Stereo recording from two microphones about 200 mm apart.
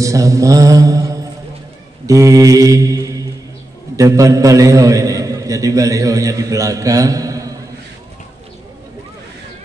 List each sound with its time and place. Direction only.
0.0 s mantra: 15° right (ahead or behind)
3.9 s a man's voice: 15° right (ahead or behind)